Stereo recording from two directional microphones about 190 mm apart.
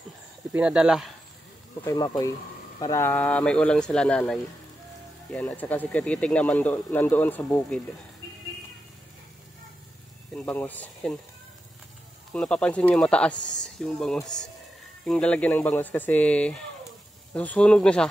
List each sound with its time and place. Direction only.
0.5 s speech: 5° right (ahead or behind)
1.9 s speech: 20° left (ahead or behind)
10.3 s speech: 10° left (ahead or behind)
12.3 s speech: 5° left (ahead or behind)